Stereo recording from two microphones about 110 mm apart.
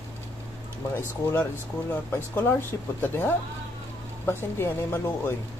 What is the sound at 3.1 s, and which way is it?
Speech, 20° left (ahead or behind).